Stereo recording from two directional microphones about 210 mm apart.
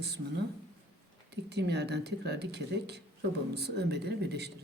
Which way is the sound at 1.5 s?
50° right (ahead or behind).